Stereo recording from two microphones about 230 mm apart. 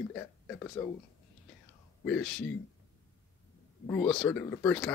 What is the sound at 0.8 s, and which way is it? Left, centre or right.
Speech, centre.